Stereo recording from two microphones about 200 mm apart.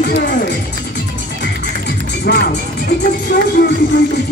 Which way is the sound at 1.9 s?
50° left (ahead or behind).